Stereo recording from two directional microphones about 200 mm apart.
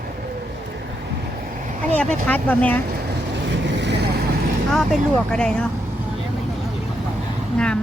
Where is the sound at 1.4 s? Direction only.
40° right (ahead or behind).